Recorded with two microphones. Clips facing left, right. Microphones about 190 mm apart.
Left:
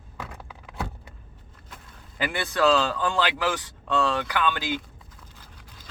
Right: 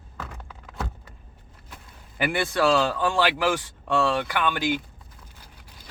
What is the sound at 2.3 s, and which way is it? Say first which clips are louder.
Speech: even; 10° right (ahead or behind).